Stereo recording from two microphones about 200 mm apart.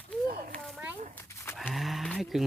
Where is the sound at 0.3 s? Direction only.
50° right (ahead or behind).